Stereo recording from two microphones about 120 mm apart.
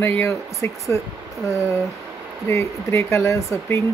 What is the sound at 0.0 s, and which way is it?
Speech, 20° left (ahead or behind).